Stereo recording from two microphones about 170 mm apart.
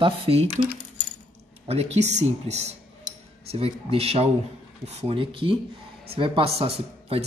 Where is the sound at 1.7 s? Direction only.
40° right (ahead or behind).